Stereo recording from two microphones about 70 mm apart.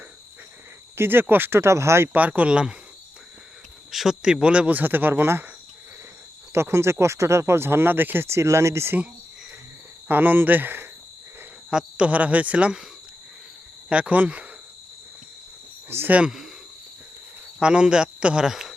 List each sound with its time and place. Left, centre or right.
0.9 s speech: right
2.1 s speech: right
3.9 s speech: centre; by 5.5 s right
6.5 s speech: right
10.1 s speech: right
11.7 s speech: centre
13.9 s speech: centre
15.9 s speech: right
17.6 s speech: centre